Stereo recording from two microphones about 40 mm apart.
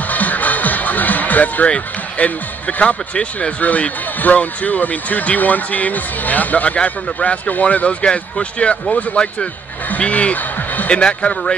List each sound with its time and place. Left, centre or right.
0.1 s music: left
2.1 s speech: left
3.6 s speech: left
9.8 s speech: left
10.3 s a sound: left
10.9 s speech: left